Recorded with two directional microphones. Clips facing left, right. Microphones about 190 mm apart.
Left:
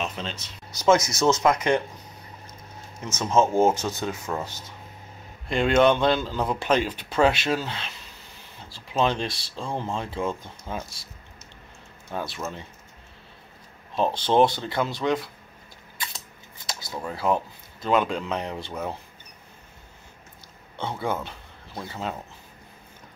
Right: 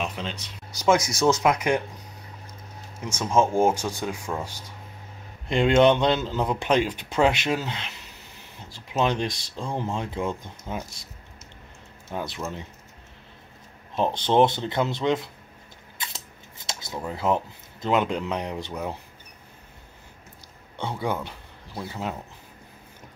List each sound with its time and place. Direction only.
0.0 s speech: 10° right (ahead or behind)
3.0 s speech: 10° right (ahead or behind)
12.1 s speech: 15° right (ahead or behind)
13.9 s speech: 20° right (ahead or behind)
16.6 s speech: 20° right (ahead or behind)
21.0 s speech: 15° right (ahead or behind)